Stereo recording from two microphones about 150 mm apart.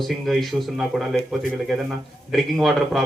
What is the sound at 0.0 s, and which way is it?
A man's voice, centre (ahead or behind).